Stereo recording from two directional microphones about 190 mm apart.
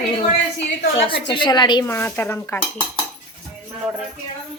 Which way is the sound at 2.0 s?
10° left (ahead or behind).